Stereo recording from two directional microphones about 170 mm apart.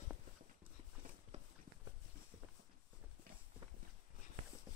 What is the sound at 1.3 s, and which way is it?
Walk, 40° right (ahead or behind).